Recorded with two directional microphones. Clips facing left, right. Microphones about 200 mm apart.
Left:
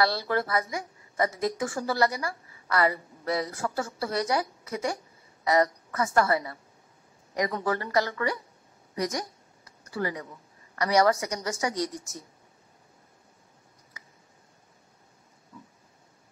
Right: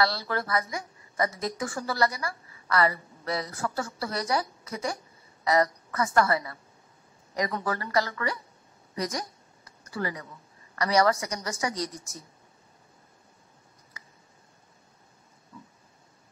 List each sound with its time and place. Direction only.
0.0 s a woman's voice: 20° left (ahead or behind)